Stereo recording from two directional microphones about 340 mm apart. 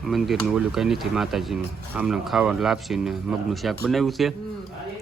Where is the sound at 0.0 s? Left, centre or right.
Centre.